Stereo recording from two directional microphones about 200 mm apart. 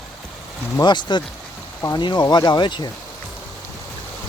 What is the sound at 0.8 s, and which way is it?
Speech, 20° left (ahead or behind).